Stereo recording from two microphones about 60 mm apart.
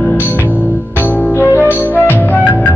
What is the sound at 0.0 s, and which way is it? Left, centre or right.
Music, left.